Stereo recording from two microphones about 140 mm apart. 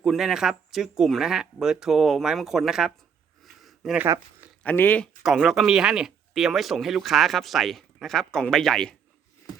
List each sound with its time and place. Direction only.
0.0 s speech: centre (ahead or behind)
3.4 s a sound: centre (ahead or behind)
4.0 s speech: 15° right (ahead or behind)
4.6 s speech: 15° left (ahead or behind)
5.2 s speech: centre (ahead or behind)